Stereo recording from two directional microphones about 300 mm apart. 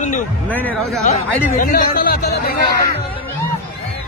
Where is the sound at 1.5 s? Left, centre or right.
Left.